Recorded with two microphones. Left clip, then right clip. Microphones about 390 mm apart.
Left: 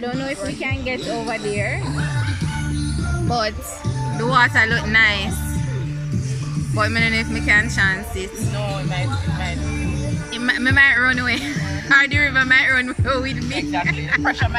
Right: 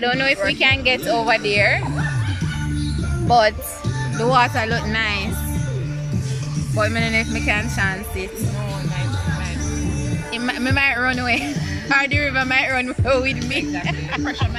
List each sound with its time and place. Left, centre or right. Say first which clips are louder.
0.0 s speech: right 7 dB; right
3.3 s music: right 7 dB; centre
4.2 s speech: left 2 dB; centre
6.8 s speech: left 1 dB; centre
10.4 s speech: left 5 dB; centre